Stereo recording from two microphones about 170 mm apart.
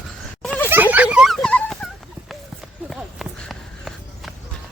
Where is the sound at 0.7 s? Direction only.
10° right (ahead or behind).